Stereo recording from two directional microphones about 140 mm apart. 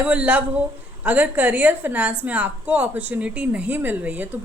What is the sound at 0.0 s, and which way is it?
A woman's voice, 10° right (ahead or behind).